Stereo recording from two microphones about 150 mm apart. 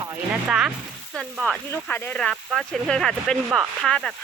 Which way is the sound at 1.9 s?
10° left (ahead or behind).